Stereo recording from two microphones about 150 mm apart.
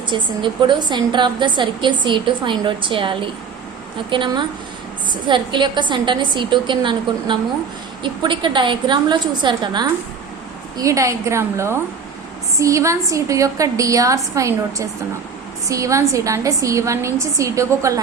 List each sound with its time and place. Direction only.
0.1 s a woman's voice: 30° right (ahead or behind)